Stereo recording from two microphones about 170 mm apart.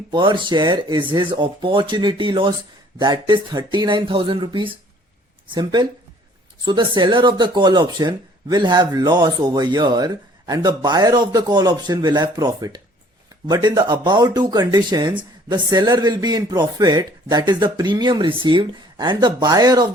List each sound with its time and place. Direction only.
0.1 s speech: 30° right (ahead or behind)